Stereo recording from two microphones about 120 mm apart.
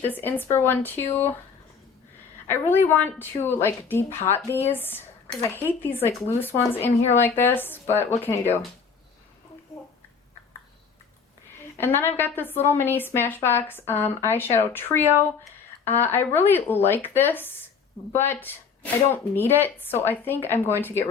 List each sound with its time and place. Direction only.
0.0 s a woman's voice: 15° left (ahead or behind)
2.5 s a woman's voice: 20° left (ahead or behind)
11.8 s speech: 20° left (ahead or behind)
16.0 s speech: 15° left (ahead or behind)